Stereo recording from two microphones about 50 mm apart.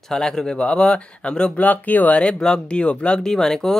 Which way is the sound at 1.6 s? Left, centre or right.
Left.